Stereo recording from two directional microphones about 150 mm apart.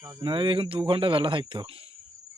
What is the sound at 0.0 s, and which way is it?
Speech, 25° right (ahead or behind).